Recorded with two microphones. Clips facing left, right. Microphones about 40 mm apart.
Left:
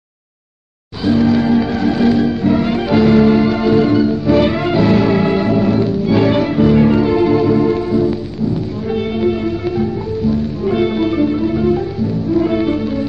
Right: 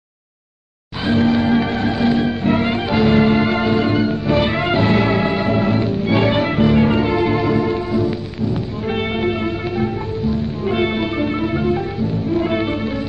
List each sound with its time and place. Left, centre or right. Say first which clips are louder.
1.0 s music: left 3 dB; right
1.9 s music: left 6 dB; centre
2.7 s music: left 4 dB; centre
3.2 s music: left 3 dB; right
4.3 s music: left 3 dB; centre
5.5 s music: left 3 dB; right
6.2 s music: left 3 dB; centre
8.8 s music: left 3 dB; right